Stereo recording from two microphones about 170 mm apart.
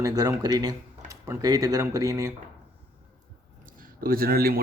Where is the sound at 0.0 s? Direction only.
20° right (ahead or behind).